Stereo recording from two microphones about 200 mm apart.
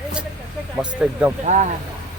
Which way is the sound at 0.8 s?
5° right (ahead or behind).